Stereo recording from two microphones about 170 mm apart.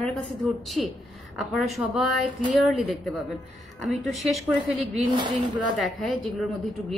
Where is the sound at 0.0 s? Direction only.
5° left (ahead or behind).